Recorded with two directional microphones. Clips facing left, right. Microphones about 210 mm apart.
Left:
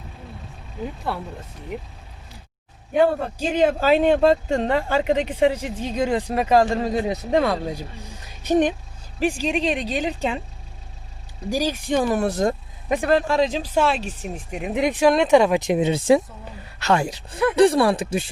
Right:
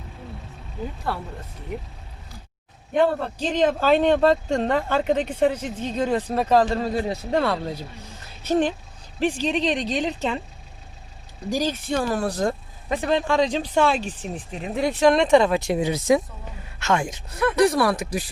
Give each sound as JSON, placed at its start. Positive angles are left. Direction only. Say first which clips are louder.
{"t": 2.9, "sound": "speech", "louder": "left 2 dB", "side_deg": 10}
{"t": 11.5, "sound": "speech", "louder": "left 2 dB", "side_deg": 10}